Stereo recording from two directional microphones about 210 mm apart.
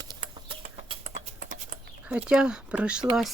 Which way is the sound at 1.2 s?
35° right (ahead or behind).